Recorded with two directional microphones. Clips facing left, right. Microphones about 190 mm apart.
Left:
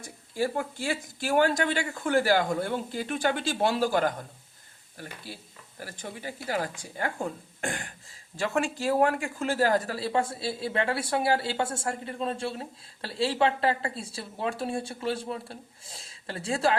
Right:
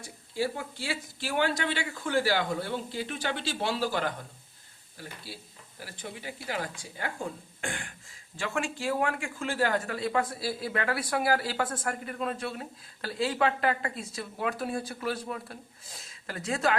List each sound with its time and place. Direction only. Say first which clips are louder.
0.0 s speech: left 2 dB; 50° left (ahead or behind)
7.6 s a sound: left 3 dB; 40° left (ahead or behind)
8.4 s speech: left 4 dB; 40° left (ahead or behind)